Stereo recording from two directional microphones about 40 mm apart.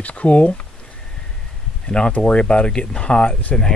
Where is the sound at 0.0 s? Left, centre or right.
Left.